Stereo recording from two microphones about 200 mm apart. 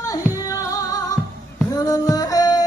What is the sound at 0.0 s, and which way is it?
Music, 15° left (ahead or behind).